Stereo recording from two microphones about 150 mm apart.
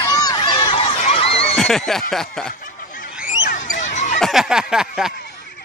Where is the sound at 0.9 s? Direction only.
45° left (ahead or behind).